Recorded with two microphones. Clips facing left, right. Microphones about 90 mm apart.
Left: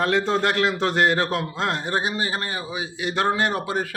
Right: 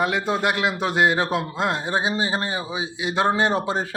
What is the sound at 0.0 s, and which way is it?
A man's voice, 10° right (ahead or behind).